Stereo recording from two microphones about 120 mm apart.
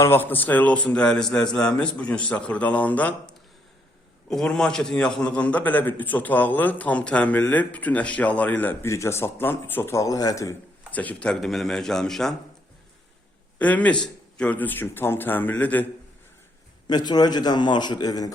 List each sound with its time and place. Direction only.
0.0 s a man's voice: 20° left (ahead or behind)
10.9 s speech: 15° left (ahead or behind)
13.6 s a man's voice: 10° left (ahead or behind)
16.8 s a man's voice: 35° left (ahead or behind)